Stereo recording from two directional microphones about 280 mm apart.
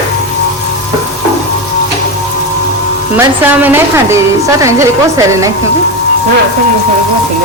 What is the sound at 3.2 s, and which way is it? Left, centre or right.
A woman's voice, centre.